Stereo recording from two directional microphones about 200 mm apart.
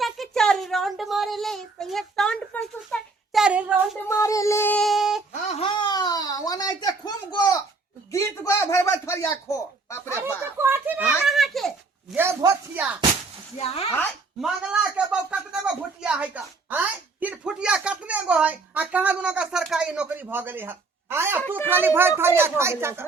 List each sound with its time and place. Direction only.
0.0 s child singing: centre (ahead or behind)
4.1 s speech: 15° left (ahead or behind); by 5.2 s centre (ahead or behind)
5.3 s speech: 30° left (ahead or behind); by 10.0 s 15° left (ahead or behind)
10.6 s a child's voice: 10° right (ahead or behind)
12.1 s speech: 10° right (ahead or behind)
13.6 s speech: 30° left (ahead or behind)
14.4 s speech: 5° right (ahead or behind)